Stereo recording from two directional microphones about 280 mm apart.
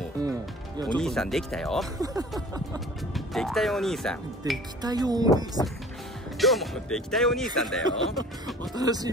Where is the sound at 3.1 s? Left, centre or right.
Centre.